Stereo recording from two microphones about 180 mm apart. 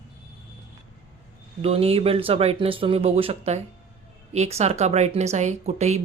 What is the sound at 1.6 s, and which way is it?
Speech, 35° right (ahead or behind).